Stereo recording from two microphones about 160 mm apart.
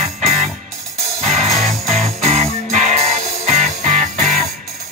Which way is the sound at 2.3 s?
45° right (ahead or behind).